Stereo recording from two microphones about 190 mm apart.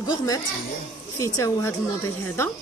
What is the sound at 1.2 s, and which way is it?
Speech, 15° left (ahead or behind).